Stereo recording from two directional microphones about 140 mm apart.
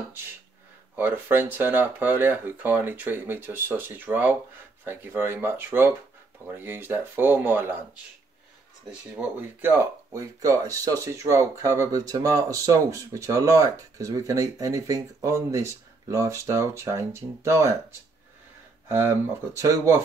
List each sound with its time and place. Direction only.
0.9 s speech: 15° right (ahead or behind)
9.6 s speech: 15° right (ahead or behind)
18.9 s speech: 15° right (ahead or behind)